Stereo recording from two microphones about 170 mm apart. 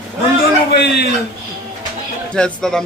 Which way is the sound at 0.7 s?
85° left.